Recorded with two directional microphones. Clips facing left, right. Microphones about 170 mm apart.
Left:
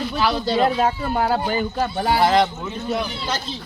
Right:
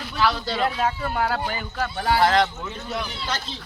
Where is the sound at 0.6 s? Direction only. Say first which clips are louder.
Left 3 dB; 35° left (ahead or behind).